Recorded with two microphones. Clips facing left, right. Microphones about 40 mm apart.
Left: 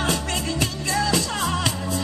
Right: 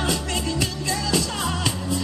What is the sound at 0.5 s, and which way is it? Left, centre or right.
Music, left.